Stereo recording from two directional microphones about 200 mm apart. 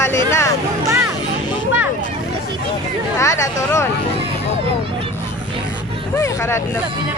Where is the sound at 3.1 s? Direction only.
15° left (ahead or behind).